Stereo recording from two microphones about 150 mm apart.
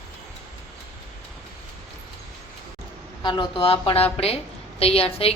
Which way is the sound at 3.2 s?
30° left (ahead or behind).